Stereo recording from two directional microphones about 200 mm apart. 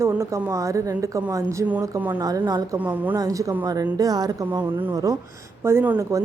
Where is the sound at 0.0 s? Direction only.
15° right (ahead or behind).